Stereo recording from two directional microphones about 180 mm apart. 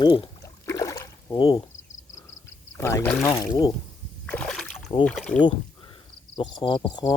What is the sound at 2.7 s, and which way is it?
Speech, 15° left (ahead or behind).